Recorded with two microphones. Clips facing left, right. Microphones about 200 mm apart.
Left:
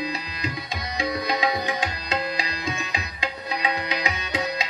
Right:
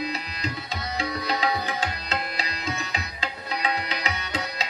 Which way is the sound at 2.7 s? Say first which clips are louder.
Left 1 dB; 15° left (ahead or behind).